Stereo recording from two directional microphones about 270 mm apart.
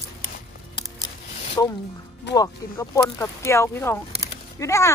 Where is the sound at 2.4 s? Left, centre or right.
Centre.